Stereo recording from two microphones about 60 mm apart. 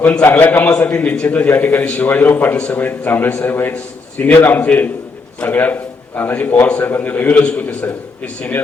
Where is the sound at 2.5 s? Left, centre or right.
Centre.